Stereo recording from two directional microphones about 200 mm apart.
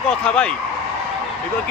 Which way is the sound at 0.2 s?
5° left (ahead or behind).